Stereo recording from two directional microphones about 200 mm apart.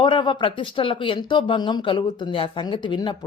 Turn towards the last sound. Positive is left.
turn(degrees=25)  # may be behind; listen again after turning